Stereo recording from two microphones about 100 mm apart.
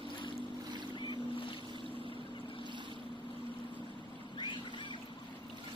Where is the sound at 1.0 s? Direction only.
55° left (ahead or behind).